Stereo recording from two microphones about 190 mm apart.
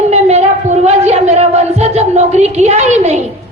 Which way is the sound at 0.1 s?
35° right (ahead or behind).